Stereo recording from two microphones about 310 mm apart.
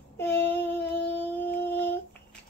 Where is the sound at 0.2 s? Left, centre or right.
Centre.